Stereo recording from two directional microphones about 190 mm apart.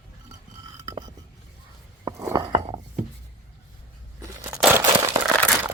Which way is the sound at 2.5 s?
35° right (ahead or behind).